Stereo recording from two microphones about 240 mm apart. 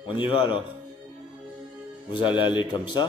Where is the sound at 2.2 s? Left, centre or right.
Centre.